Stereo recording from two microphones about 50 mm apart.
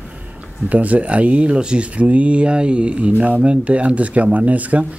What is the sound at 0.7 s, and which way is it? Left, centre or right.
Speech, right.